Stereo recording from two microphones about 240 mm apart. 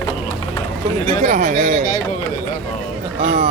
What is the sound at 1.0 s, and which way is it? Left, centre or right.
Speech, right.